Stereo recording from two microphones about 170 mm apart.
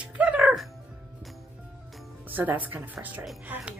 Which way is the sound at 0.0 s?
5° right (ahead or behind).